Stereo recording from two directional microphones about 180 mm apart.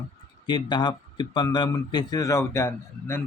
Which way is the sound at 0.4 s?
25° left (ahead or behind).